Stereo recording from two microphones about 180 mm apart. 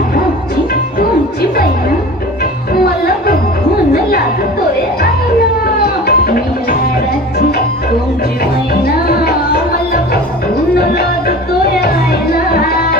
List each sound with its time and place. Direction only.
0.9 s music: 55° left (ahead or behind)
2.7 s music: 55° left (ahead or behind)
8.8 s music: 60° left (ahead or behind)
11.8 s music: 60° left (ahead or behind)